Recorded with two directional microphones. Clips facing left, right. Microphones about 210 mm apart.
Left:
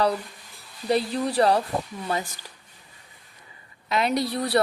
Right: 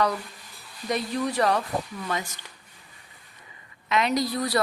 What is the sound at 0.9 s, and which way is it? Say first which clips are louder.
Speech: left 3 dB; 30° left (ahead or behind).